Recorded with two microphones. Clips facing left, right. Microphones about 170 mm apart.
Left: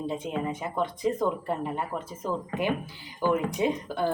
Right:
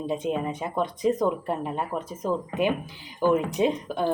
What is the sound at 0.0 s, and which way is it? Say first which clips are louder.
A woman's voice: right 3 dB; 20° right (ahead or behind).